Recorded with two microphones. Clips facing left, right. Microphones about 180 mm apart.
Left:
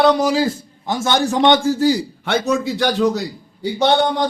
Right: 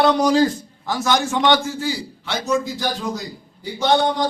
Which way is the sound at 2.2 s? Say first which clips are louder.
Left 3 dB; 60° left (ahead or behind).